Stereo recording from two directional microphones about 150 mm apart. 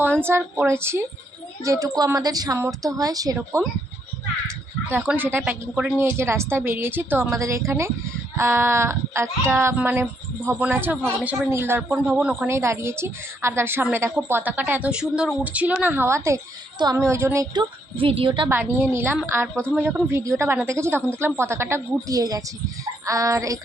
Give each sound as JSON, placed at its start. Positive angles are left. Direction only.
{"t": 0.2, "sound": "a woman's voice", "side_deg": -15}
{"t": 17.5, "sound": "a woman's voice", "side_deg": -35}
{"t": 18.4, "sound": "a woman's voice", "side_deg": -15}